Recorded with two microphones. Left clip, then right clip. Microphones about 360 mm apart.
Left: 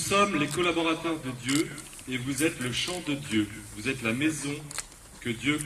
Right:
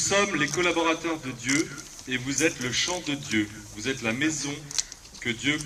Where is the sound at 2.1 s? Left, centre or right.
Centre.